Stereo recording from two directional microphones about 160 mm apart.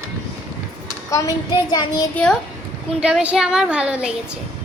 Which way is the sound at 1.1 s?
20° left (ahead or behind).